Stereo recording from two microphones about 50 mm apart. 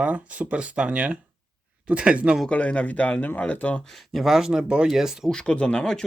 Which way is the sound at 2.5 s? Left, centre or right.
Left.